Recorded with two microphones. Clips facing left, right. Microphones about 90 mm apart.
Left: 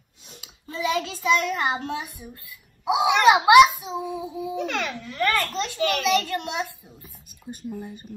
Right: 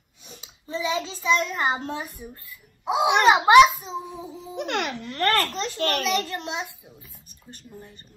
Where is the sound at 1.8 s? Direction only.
35° right (ahead or behind).